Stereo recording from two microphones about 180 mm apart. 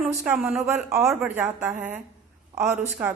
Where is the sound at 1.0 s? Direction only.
Centre (ahead or behind).